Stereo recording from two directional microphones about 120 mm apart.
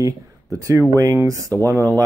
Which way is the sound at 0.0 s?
30° right (ahead or behind).